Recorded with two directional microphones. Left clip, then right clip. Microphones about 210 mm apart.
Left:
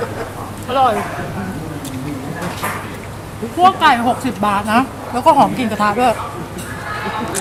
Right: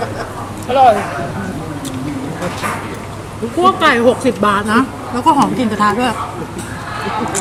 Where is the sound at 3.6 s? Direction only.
10° left (ahead or behind).